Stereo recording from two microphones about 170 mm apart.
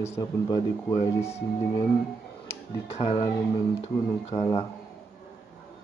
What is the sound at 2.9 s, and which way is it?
Speech, 35° left (ahead or behind).